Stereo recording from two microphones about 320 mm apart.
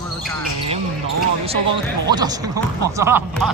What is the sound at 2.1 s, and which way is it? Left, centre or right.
Speech, centre.